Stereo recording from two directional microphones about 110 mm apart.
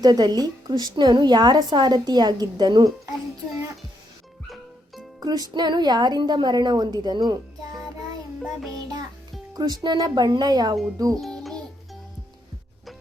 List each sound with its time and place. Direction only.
0.0 s a woman's voice: 35° right (ahead or behind)
4.4 s music: centre (ahead or behind)
5.2 s a woman's voice: 35° right (ahead or behind)
7.9 s music: centre (ahead or behind)
9.6 s a woman's voice: 40° right (ahead or behind)
11.2 s music: centre (ahead or behind)